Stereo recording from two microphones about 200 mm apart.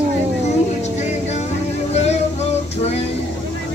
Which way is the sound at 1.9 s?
35° left (ahead or behind).